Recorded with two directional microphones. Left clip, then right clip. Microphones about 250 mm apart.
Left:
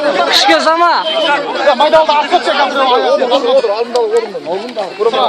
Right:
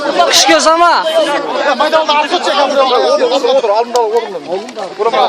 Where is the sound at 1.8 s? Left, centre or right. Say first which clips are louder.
Left 2 dB; right.